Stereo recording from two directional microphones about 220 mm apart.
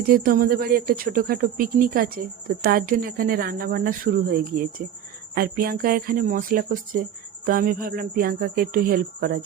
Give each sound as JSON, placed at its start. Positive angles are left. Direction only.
{"t": 0.1, "sound": "speech", "side_deg": -40}